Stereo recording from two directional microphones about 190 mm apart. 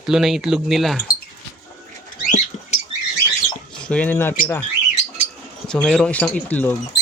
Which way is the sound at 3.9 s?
10° left (ahead or behind).